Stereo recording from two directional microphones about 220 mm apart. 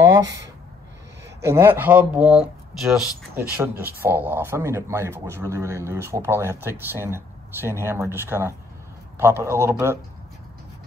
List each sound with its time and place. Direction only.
0.2 s speech: 55° right (ahead or behind)
1.4 s speech: 10° right (ahead or behind)